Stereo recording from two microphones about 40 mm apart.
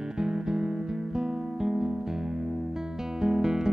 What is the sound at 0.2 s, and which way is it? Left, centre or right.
Music, centre.